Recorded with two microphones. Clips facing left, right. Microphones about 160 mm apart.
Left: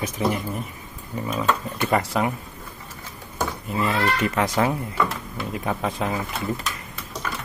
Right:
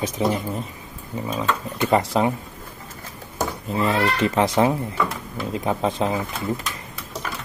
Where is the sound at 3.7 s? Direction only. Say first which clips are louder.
Right 2 dB; 25° right (ahead or behind).